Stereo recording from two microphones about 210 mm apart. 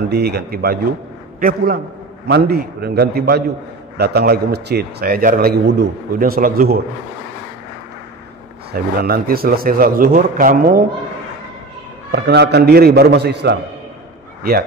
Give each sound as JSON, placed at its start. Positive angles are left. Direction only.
{"t": 0.1, "sound": "a man's voice", "side_deg": -50}
{"t": 8.7, "sound": "a man's voice", "side_deg": -45}
{"t": 12.1, "sound": "a man's voice", "side_deg": -50}